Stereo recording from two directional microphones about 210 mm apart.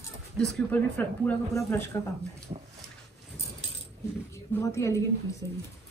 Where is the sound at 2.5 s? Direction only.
25° right (ahead or behind).